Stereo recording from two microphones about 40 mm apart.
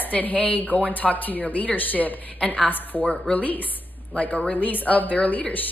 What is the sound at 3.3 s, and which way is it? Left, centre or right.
A woman's voice, left.